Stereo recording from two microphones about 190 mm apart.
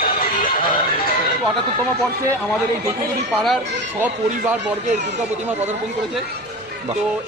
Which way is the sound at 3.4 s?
5° right (ahead or behind).